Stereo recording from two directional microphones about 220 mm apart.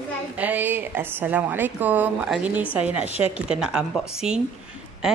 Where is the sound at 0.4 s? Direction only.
10° right (ahead or behind).